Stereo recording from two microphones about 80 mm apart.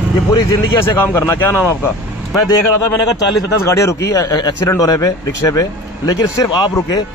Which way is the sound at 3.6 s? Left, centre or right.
Left.